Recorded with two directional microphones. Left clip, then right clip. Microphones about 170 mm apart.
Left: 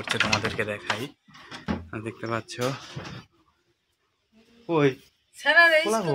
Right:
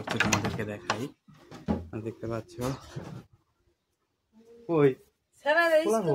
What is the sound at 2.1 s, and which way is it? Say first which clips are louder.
Speech: left 5 dB; 20° left (ahead or behind).